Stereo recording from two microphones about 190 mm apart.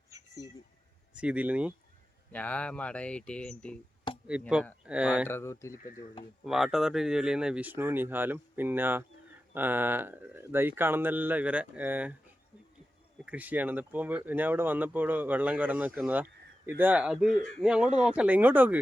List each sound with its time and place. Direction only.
0.1 s a sound: 15° right (ahead or behind)
1.1 s speech: 5° right (ahead or behind)
2.3 s speech: 5° left (ahead or behind)
5.3 s speech: 15° left (ahead or behind)
5.7 s speech: 45° left (ahead or behind)
6.4 s speech: centre (ahead or behind)
13.2 s speech: 10° right (ahead or behind)